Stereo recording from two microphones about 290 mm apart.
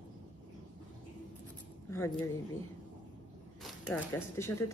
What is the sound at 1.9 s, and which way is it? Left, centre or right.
Speech, centre.